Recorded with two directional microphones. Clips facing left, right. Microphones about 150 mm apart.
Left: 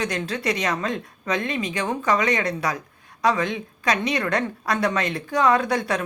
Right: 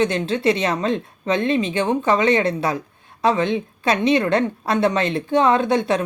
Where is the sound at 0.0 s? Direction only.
25° right (ahead or behind).